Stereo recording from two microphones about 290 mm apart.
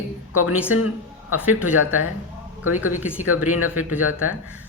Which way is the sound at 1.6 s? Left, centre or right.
Left.